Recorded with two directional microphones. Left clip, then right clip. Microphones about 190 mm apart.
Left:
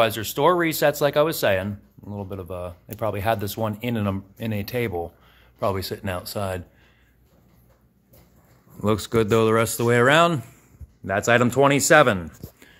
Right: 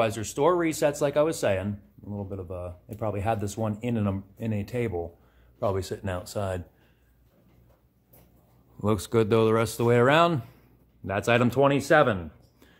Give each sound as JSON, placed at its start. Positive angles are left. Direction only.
{"t": 0.0, "sound": "speech", "side_deg": 20}
{"t": 5.6, "sound": "speech", "side_deg": 10}
{"t": 8.8, "sound": "speech", "side_deg": 5}
{"t": 11.9, "sound": "speech", "side_deg": 25}